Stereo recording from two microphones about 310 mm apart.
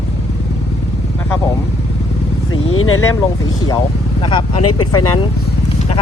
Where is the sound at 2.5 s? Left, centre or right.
Left.